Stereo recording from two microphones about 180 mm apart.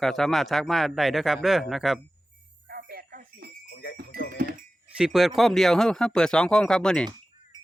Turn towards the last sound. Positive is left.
turn(degrees=5)  # may be behind; listen again after turning